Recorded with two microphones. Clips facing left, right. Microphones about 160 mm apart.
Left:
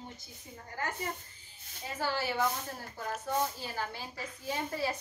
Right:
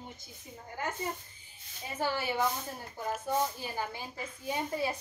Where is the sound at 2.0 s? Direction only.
20° right (ahead or behind).